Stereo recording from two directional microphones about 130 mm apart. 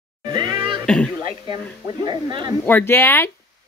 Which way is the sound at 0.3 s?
35° right (ahead or behind).